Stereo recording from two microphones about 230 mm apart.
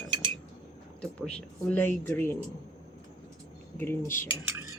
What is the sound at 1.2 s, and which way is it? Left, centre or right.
Speech, centre.